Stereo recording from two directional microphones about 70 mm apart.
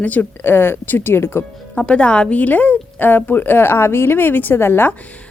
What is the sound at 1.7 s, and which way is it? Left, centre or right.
A woman's voice, centre.